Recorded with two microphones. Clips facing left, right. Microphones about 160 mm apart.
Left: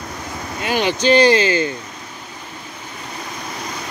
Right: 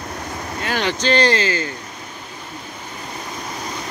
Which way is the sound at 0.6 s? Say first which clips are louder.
Left 4 dB; 15° left (ahead or behind).